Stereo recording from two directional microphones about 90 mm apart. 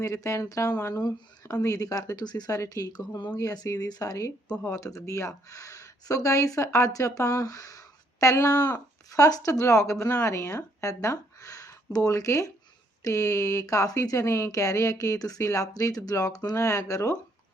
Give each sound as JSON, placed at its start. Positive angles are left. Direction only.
{"t": 0.0, "sound": "speech", "side_deg": 35}
{"t": 8.5, "sound": "speech", "side_deg": 20}
{"t": 9.0, "sound": "speech", "side_deg": 40}